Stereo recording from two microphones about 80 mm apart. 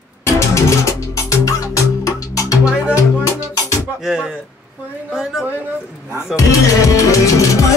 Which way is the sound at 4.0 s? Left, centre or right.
Centre.